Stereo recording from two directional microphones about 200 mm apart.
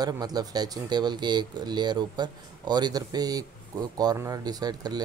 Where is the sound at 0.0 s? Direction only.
20° right (ahead or behind).